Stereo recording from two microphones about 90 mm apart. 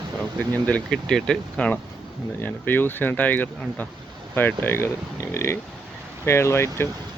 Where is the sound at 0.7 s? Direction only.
10° left (ahead or behind).